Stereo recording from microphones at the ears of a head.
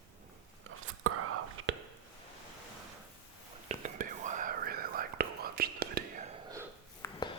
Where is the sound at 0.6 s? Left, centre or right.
Right.